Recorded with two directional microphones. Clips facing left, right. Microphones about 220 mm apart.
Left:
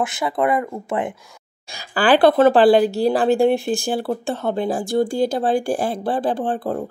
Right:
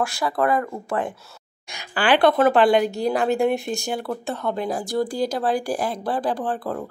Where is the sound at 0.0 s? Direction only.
20° left (ahead or behind).